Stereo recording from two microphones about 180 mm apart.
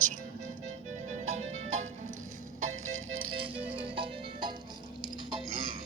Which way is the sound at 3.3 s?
30° right (ahead or behind).